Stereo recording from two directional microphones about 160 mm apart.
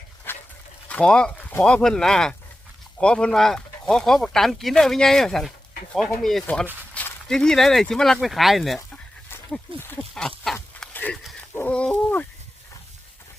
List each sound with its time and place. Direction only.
0.3 s dog: 15° left (ahead or behind)
0.9 s speech: 5° left (ahead or behind)
9.5 s a sound: 10° left (ahead or behind)